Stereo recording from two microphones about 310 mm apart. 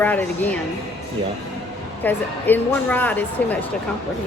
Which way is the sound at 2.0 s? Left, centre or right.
Centre.